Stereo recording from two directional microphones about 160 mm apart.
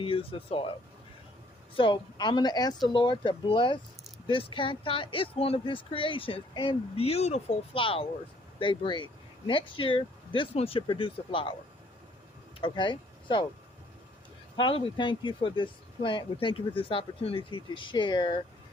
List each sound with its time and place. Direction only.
0.0 s speech: 35° left (ahead or behind)
1.7 s speech: 30° left (ahead or behind)
12.5 s speech: 30° left (ahead or behind)
14.5 s speech: 30° left (ahead or behind)